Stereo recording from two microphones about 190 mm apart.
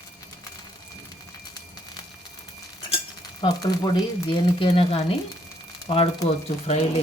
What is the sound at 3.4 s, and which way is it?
Speech, 20° left (ahead or behind).